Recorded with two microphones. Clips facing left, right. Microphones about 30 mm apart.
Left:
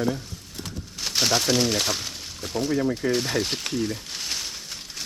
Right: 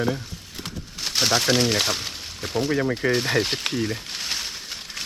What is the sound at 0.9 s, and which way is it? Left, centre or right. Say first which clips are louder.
Speech: right 1 dB; centre.